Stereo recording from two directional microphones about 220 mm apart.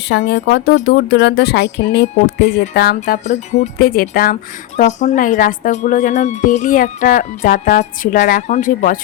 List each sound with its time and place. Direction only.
0.3 s speech: 50° left (ahead or behind)